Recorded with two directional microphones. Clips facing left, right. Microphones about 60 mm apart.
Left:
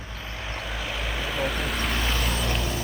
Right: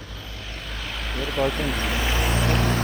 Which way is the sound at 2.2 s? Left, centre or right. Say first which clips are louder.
Right 4 dB; right.